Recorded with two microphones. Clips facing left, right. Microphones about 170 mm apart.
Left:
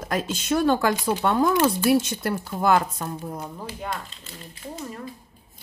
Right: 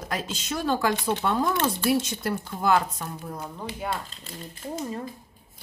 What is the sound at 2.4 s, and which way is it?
Speech, 50° left (ahead or behind).